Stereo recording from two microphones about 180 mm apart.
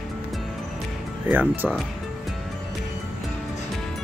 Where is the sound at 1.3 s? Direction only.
10° right (ahead or behind).